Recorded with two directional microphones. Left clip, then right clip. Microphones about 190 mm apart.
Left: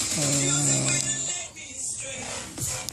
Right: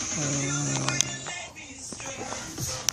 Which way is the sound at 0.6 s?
15° left (ahead or behind).